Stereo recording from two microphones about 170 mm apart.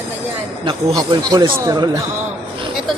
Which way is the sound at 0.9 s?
25° right (ahead or behind).